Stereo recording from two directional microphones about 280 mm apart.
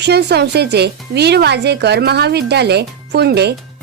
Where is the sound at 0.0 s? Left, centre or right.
Right.